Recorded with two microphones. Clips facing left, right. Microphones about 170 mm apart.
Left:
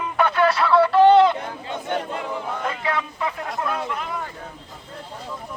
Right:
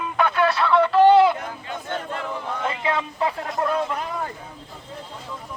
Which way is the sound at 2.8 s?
25° right (ahead or behind).